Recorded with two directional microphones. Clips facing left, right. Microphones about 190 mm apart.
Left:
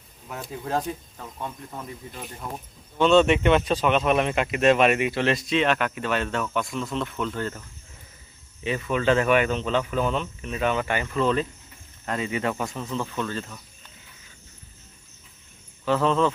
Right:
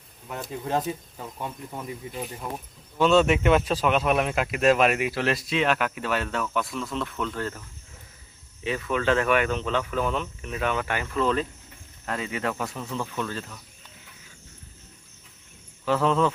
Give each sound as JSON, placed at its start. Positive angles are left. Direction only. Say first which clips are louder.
{"t": 0.3, "sound": "speech", "louder": "right 1 dB", "side_deg": 0}
{"t": 8.6, "sound": "speech", "louder": "left 2 dB", "side_deg": 0}
{"t": 15.9, "sound": "speech", "louder": "left 1 dB", "side_deg": -10}